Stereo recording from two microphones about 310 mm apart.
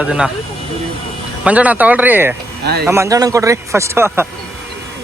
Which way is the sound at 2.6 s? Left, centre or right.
Right.